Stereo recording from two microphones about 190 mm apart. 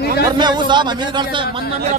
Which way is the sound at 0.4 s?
25° right (ahead or behind).